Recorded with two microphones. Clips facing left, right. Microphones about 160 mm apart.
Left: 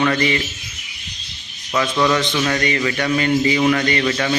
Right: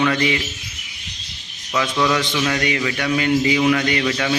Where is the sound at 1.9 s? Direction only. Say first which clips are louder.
Left 2 dB; centre (ahead or behind).